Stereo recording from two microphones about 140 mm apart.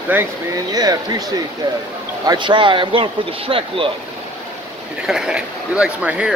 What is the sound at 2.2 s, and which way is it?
Speech, 35° right (ahead or behind).